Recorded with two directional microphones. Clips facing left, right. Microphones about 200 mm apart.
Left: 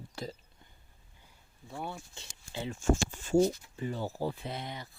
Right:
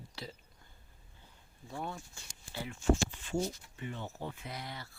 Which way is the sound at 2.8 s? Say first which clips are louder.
Even; 45° left (ahead or behind).